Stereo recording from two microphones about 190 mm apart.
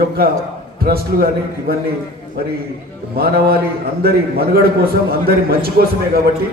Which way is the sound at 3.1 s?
55° right (ahead or behind).